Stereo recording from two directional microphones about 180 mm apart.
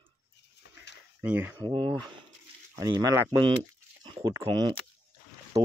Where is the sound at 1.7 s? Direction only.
25° right (ahead or behind).